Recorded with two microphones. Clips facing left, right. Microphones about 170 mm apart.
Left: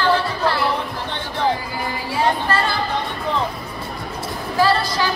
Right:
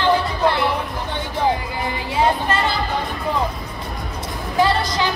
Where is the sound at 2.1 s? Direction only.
20° right (ahead or behind).